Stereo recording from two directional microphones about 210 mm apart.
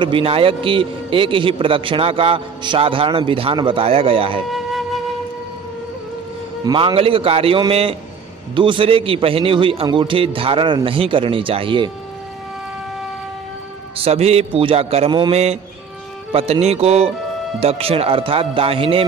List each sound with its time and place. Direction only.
0.0 s a man's voice: 25° right (ahead or behind)
4.5 s music: centre (ahead or behind)
6.6 s a man's voice: 25° right (ahead or behind)
13.9 s a man's voice: 30° right (ahead or behind)